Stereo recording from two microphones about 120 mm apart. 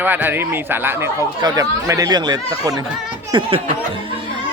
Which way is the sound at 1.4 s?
30° right (ahead or behind).